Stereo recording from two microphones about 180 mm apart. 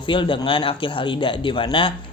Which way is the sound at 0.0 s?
25° left (ahead or behind).